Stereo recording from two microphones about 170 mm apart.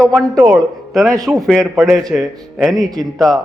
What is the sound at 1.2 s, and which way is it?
A man's voice, centre (ahead or behind).